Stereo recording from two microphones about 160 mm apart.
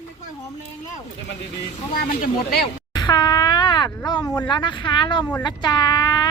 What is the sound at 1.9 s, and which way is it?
Speech, 75° left (ahead or behind).